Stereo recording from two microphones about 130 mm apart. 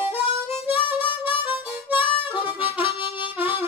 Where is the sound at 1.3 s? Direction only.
40° left (ahead or behind).